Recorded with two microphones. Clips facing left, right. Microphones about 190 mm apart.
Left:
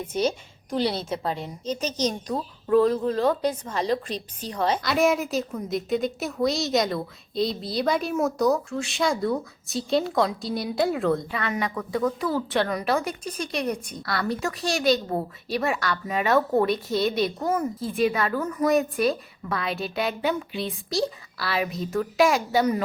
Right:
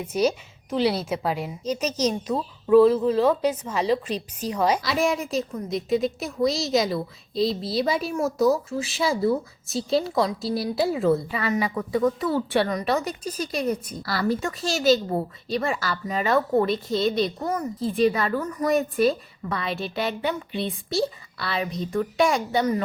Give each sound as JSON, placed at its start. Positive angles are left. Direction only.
{"t": 0.3, "sound": "a woman's voice", "side_deg": -5}
{"t": 1.8, "sound": "speech", "side_deg": 30}
{"t": 2.6, "sound": "a woman's voice", "side_deg": -5}
{"t": 4.9, "sound": "a woman's voice", "side_deg": 0}